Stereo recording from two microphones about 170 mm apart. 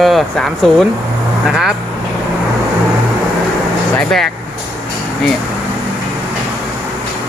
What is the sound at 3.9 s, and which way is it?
Speech, centre (ahead or behind).